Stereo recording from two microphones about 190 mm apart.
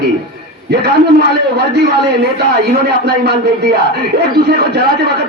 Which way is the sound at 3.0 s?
60° right (ahead or behind).